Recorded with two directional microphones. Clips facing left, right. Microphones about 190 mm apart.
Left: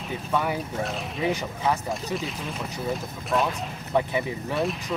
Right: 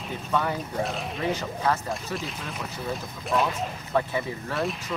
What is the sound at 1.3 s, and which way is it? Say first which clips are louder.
Speech: even; 15° left (ahead or behind).